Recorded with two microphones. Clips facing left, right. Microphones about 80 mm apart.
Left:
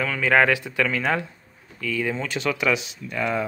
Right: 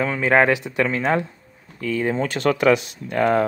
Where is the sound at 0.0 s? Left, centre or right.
Right.